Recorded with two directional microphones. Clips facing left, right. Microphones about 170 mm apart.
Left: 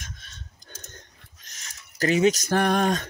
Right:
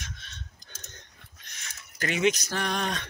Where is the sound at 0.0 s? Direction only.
45° left (ahead or behind).